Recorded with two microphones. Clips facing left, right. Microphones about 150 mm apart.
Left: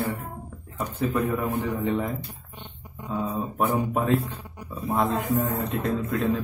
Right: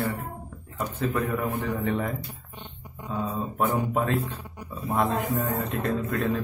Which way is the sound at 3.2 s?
15° left (ahead or behind).